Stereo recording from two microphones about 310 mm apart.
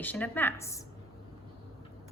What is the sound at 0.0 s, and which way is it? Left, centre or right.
Speech, centre.